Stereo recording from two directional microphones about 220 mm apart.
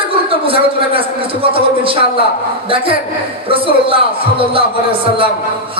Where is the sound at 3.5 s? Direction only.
25° right (ahead or behind).